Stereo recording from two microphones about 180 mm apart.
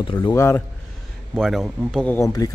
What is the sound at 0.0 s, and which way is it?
Speech, 25° left (ahead or behind).